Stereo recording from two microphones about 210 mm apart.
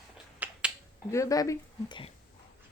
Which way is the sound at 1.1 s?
15° left (ahead or behind).